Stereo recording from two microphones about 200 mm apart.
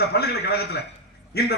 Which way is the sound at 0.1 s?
55° left (ahead or behind).